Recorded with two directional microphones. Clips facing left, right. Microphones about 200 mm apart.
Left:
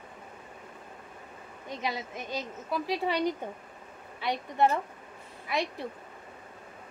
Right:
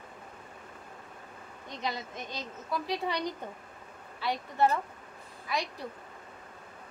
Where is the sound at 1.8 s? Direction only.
10° left (ahead or behind).